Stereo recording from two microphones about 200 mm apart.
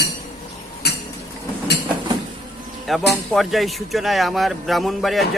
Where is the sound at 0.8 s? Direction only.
55° left (ahead or behind).